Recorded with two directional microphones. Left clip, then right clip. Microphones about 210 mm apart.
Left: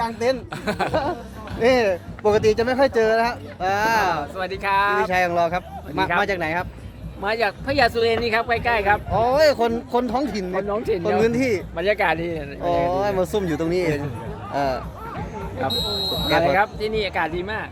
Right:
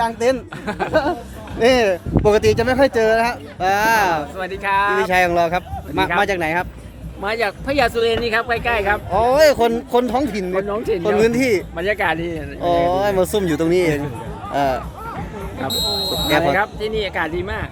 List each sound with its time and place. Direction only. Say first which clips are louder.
0.0 s speech: right 4 dB; 40° right (ahead or behind)
0.6 s speech: even; 55° left (ahead or behind)
1.5 s speech: right 3 dB; 45° right (ahead or behind)
4.4 s speech: right 2 dB; 10° left (ahead or behind)
5.0 s speech: right 4 dB; 35° right (ahead or behind)
7.2 s speech: right 1 dB; 5° right (ahead or behind)
9.1 s speech: right 5 dB; 30° right (ahead or behind)
10.7 s speech: right 2 dB; centre (ahead or behind)
11.2 s speech: right 4 dB; 35° right (ahead or behind)
11.8 s speech: right 1 dB; 5° left (ahead or behind)
12.6 s speech: right 4 dB; 35° right (ahead or behind)
15.7 s speech: right 6 dB; 55° right (ahead or behind)
16.6 s speech: right 1 dB; 5° left (ahead or behind)